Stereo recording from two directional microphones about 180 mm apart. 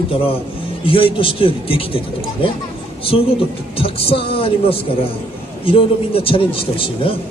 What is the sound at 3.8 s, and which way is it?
A woman's voice, 30° left (ahead or behind).